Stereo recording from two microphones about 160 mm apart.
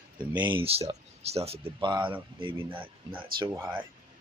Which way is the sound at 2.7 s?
10° right (ahead or behind).